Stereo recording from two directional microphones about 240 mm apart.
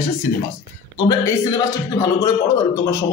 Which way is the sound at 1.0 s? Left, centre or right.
Centre.